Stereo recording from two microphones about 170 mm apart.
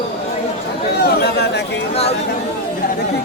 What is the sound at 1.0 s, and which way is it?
Chatter, 70° left (ahead or behind).